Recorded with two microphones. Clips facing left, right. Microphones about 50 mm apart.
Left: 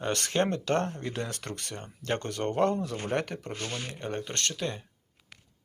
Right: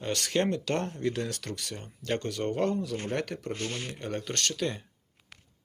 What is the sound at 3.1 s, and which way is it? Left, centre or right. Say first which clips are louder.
Speech: left 3 dB; left.